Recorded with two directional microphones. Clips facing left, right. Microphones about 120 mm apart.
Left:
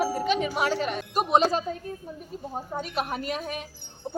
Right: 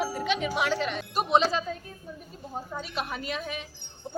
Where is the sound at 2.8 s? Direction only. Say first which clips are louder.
Left 5 dB; 45° left (ahead or behind).